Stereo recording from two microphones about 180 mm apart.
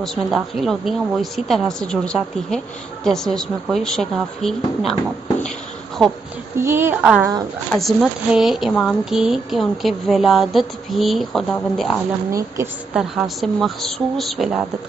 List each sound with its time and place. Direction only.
0.0 s a woman's voice: centre (ahead or behind)
6.6 s a woman's voice: 15° right (ahead or behind)
12.3 s a woman's voice: 15° right (ahead or behind)
12.9 s a woman's voice: centre (ahead or behind)